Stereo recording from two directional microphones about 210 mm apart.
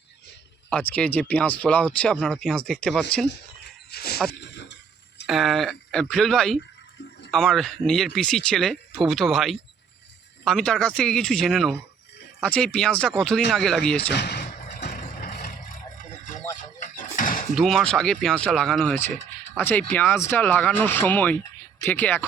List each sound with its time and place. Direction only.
0.7 s speech: 5° left (ahead or behind)
3.9 s dog: 50° left (ahead or behind)
4.3 s a sound: 55° left (ahead or behind)
5.2 s speech: centre (ahead or behind)
14.1 s vehicle: 50° left (ahead or behind)
16.6 s a sound: 40° left (ahead or behind)
17.5 s speech: centre (ahead or behind)